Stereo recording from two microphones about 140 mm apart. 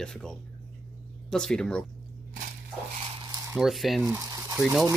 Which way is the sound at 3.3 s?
20° right (ahead or behind).